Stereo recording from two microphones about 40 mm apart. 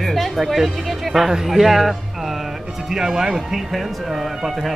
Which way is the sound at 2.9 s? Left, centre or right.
Centre.